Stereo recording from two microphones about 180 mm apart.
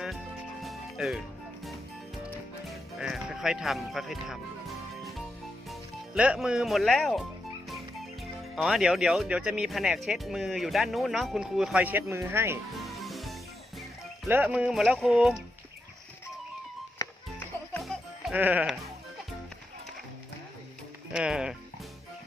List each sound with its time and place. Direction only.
0.6 s music: centre (ahead or behind)
3.0 s speech: 5° right (ahead or behind)
5.6 s speech: 5° right (ahead or behind)
13.0 s music: centre (ahead or behind)
14.3 s speech: 10° right (ahead or behind)
17.0 s music: 15° left (ahead or behind)
17.7 s music: centre (ahead or behind)
21.1 s speech: 5° right (ahead or behind)